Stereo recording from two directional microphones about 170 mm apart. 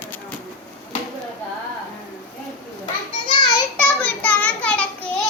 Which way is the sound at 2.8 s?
30° left (ahead or behind).